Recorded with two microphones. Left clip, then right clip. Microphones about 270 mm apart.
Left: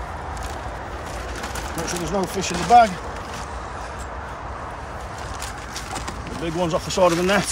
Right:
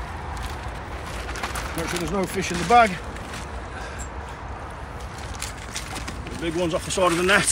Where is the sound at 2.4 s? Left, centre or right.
Centre.